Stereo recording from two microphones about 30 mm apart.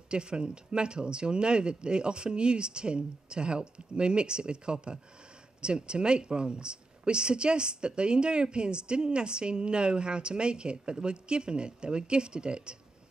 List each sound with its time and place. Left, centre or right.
0.1 s speech: right